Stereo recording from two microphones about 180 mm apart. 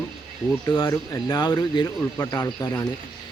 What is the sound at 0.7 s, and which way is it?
Speech, 15° left (ahead or behind).